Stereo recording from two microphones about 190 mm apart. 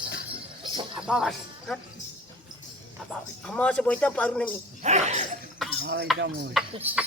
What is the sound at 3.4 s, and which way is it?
Speech, 5° left (ahead or behind).